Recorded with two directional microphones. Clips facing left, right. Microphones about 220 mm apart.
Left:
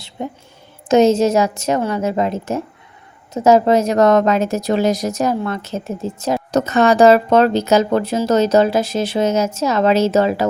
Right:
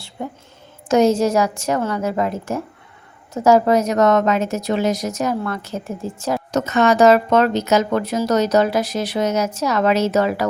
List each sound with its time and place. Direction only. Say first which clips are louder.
0.2 s a woman's voice: left 2 dB; 20° left (ahead or behind)
5.4 s speech: left 2 dB; 20° left (ahead or behind)
6.5 s speech: left 2 dB; 35° left (ahead or behind)